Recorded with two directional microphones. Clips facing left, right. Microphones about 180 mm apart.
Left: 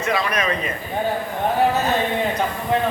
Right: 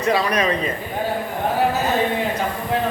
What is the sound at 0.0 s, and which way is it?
Speech, 35° right (ahead or behind).